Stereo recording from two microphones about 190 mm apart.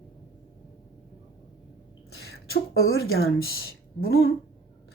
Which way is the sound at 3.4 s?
55° left (ahead or behind).